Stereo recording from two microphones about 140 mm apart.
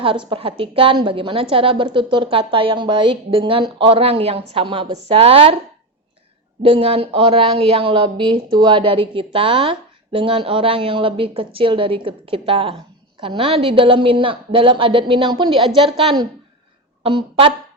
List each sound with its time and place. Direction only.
0.3 s a woman's voice: 40° right (ahead or behind)
6.6 s a woman's voice: 45° right (ahead or behind)